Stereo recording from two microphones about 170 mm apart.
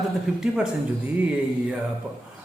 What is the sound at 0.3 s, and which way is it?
Speech, 5° right (ahead or behind).